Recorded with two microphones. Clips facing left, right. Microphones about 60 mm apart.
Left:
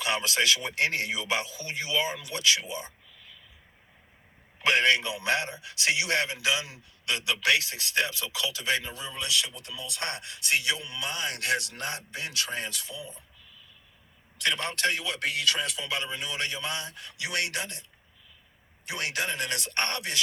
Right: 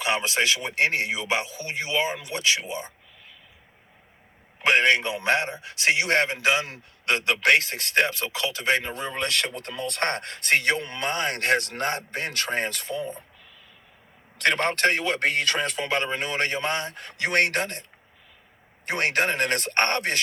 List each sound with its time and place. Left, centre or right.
0.0 s speech: right
4.6 s a man's voice: right
18.9 s a man's voice: right